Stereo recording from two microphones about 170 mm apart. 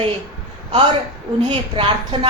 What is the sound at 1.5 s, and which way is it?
Speech, 30° right (ahead or behind).